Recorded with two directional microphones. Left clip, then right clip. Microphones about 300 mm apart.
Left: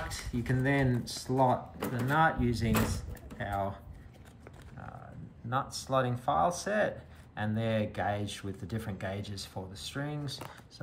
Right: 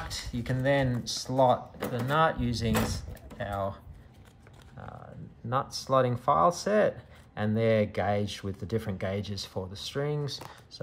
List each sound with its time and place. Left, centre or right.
0.1 s speech: centre
5.5 s speech: right